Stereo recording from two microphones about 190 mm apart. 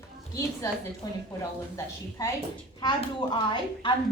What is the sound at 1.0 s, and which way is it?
A woman's voice, 20° left (ahead or behind).